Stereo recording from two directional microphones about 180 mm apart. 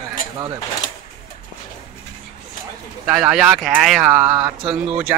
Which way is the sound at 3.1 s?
5° right (ahead or behind).